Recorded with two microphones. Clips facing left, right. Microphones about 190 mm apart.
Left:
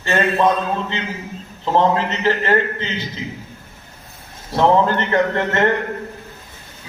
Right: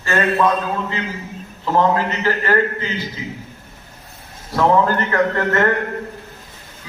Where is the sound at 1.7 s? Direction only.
25° left (ahead or behind).